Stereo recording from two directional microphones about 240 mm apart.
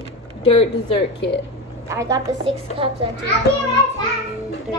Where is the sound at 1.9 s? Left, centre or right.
Centre.